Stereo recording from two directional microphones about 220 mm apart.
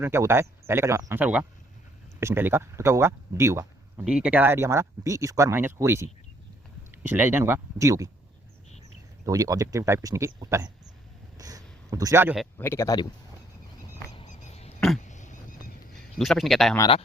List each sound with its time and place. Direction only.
0.0 s speech: 10° right (ahead or behind)
9.2 s speech: 15° right (ahead or behind)
11.3 s a sound: 15° right (ahead or behind)
12.5 s speech: 10° left (ahead or behind)
14.1 s a sound: 30° left (ahead or behind)
16.1 s speech: centre (ahead or behind)
16.7 s speech: 20° left (ahead or behind)